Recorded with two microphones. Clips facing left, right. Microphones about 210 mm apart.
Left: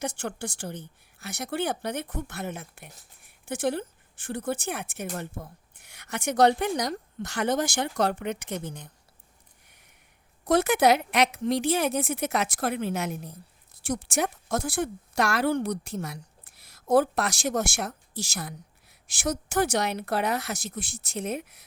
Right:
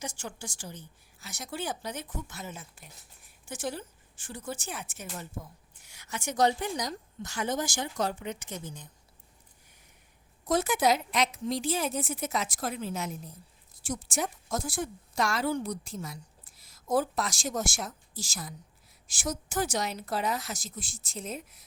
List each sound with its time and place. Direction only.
0.0 s a woman's voice: 60° left (ahead or behind)
10.4 s a woman's voice: 65° left (ahead or behind)